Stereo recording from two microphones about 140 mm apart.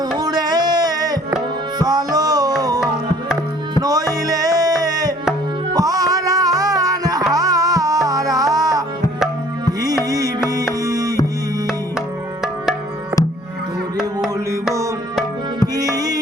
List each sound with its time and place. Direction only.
0.2 s music: 30° right (ahead or behind)
3.8 s music: 25° right (ahead or behind)
9.8 s music: 25° right (ahead or behind)
14.5 s music: 20° right (ahead or behind)